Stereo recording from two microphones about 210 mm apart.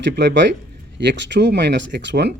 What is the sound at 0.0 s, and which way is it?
Speech, 55° right (ahead or behind).